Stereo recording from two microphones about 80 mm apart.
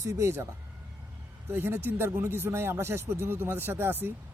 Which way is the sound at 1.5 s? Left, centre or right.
Right.